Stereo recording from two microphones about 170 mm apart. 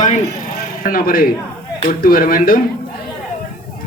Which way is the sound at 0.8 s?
55° left (ahead or behind).